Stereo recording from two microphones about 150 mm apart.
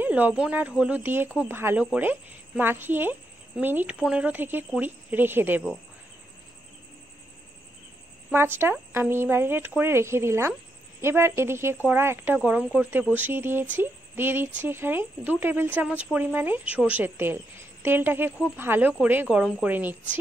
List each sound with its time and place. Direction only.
0.0 s a woman's voice: 10° right (ahead or behind)
8.3 s a woman's voice: 15° right (ahead or behind)